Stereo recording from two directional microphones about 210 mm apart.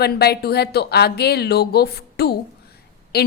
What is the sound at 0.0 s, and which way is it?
Speech, 50° left (ahead or behind).